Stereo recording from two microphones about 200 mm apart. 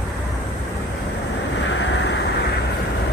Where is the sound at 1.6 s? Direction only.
65° left (ahead or behind).